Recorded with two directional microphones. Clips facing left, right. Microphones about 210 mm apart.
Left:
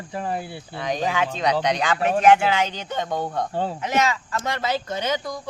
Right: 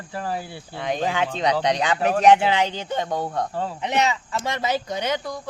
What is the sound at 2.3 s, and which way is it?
Speech, 15° right (ahead or behind).